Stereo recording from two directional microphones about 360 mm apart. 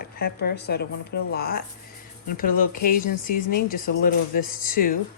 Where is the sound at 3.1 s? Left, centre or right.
Left.